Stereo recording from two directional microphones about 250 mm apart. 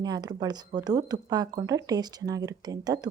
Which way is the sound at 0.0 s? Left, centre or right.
Centre.